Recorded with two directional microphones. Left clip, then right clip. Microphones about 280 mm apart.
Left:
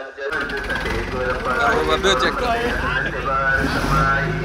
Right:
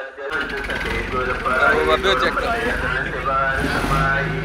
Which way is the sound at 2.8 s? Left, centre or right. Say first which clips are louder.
Even; left.